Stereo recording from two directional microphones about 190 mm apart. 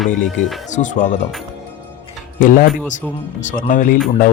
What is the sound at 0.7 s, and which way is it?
Speech, 40° left (ahead or behind).